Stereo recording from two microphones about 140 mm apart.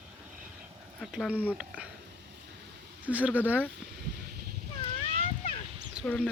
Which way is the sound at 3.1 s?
10° right (ahead or behind).